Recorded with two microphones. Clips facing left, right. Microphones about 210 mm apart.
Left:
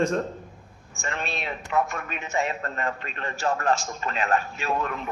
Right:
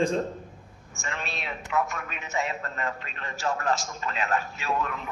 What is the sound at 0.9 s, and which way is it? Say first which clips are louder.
A man's voice: left 4 dB; 55° left (ahead or behind).